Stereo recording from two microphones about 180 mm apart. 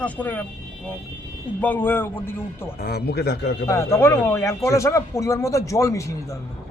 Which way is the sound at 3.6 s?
15° left (ahead or behind).